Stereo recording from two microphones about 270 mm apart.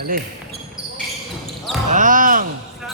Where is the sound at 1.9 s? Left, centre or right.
Right.